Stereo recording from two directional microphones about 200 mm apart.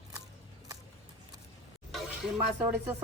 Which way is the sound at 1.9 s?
Centre (ahead or behind).